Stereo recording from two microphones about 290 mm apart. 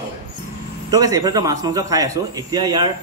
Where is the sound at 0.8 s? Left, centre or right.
Centre.